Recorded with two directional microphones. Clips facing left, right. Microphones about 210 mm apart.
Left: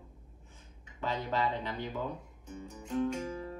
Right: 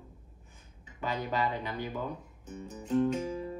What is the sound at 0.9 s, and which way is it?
Speech, 15° right (ahead or behind).